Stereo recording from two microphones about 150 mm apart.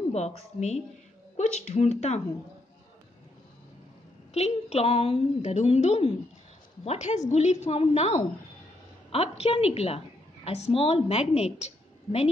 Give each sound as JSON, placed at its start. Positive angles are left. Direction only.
{"t": 0.1, "sound": "a woman's voice", "side_deg": 50}
{"t": 4.3, "sound": "a woman's voice", "side_deg": 45}